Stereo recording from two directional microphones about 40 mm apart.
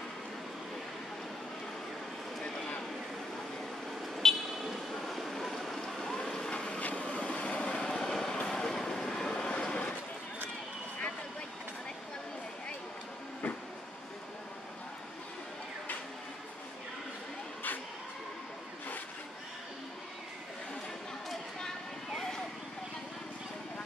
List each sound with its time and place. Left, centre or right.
4.2 s vehicle: centre
4.9 s a sound: centre
5.9 s vehicle: centre
6.5 s vehicle: left
7.9 s vehicle: centre; by 9.9 s left
21.5 s a sound: centre